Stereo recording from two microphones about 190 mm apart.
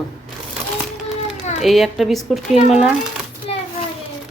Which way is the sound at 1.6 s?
Centre (ahead or behind).